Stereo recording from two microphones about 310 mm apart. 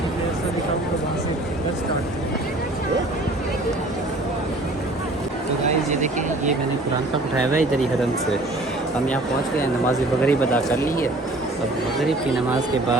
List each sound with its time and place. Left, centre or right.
5.6 s speech: right
10.2 s speech: centre